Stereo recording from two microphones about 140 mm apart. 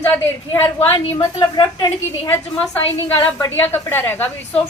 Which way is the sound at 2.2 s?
15° left (ahead or behind).